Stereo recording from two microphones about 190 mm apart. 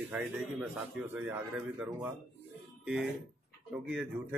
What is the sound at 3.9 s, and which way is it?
Speech, 5° right (ahead or behind).